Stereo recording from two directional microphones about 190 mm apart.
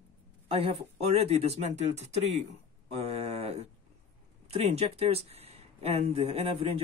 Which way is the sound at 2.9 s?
35° right (ahead or behind).